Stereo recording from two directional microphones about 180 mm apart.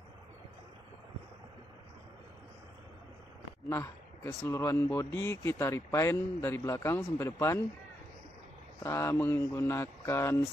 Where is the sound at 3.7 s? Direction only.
15° left (ahead or behind).